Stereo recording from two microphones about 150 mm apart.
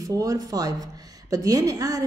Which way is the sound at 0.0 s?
25° right (ahead or behind).